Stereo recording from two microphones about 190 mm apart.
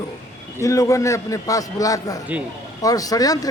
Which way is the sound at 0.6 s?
15° left (ahead or behind).